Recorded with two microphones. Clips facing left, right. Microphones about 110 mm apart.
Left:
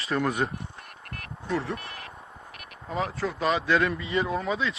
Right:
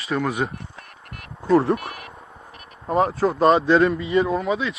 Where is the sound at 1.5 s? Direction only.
75° right (ahead or behind).